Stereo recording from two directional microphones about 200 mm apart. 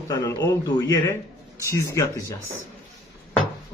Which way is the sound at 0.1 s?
20° left (ahead or behind).